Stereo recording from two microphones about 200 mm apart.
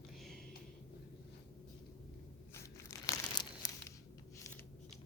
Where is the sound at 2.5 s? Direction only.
15° left (ahead or behind).